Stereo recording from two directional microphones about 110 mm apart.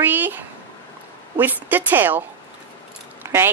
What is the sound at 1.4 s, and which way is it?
Speech, 15° right (ahead or behind).